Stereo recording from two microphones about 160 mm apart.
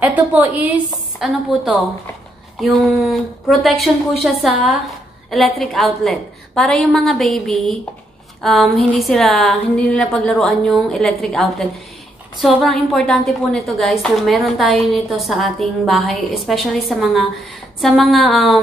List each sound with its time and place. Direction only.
0.0 s a woman's voice: 10° right (ahead or behind)